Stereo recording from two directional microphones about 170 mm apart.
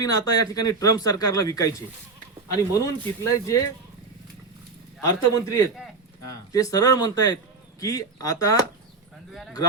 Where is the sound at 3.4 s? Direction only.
20° left (ahead or behind).